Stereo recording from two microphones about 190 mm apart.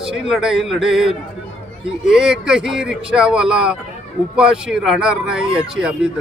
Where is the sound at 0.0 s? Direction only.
5° right (ahead or behind).